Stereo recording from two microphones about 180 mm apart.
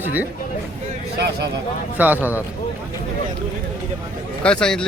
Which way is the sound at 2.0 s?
10° right (ahead or behind).